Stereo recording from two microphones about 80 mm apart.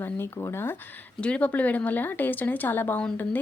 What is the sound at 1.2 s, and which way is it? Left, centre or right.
Speech, centre.